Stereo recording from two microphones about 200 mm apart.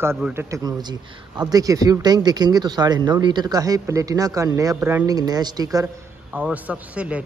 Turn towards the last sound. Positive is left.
turn(degrees=-5)  # may be behind; listen again after turning